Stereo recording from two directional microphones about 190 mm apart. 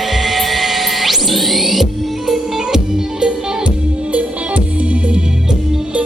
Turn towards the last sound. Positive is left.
turn(degrees=-5)  # may be behind; listen again after turning